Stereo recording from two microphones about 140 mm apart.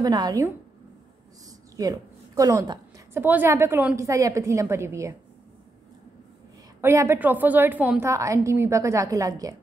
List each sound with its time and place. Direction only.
0.0 s a woman's voice: 25° right (ahead or behind)
1.8 s speech: 25° right (ahead or behind)
3.1 s a woman's voice: 15° right (ahead or behind)
6.8 s a woman's voice: 20° right (ahead or behind)
8.1 s a woman's voice: 20° right (ahead or behind)